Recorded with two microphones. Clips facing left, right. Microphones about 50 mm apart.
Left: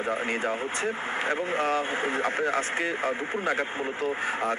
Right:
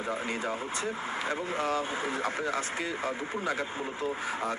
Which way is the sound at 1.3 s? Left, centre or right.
Left.